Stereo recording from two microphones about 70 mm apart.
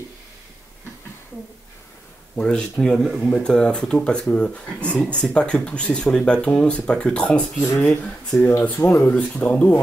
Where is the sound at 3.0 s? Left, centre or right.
Centre.